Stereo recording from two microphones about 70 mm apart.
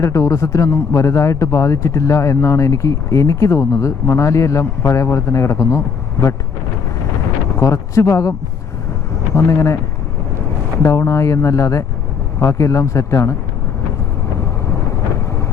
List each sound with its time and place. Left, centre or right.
0.0 s speech: left
7.6 s speech: left
10.8 s speech: left